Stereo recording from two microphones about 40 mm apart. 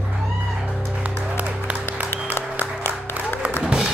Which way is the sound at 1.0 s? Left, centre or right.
Right.